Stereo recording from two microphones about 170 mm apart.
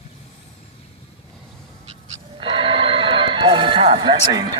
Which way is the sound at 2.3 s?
30° right (ahead or behind).